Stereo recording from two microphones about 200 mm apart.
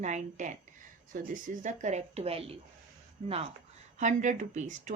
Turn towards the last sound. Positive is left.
turn(degrees=-35)  # may be behind; listen again after turning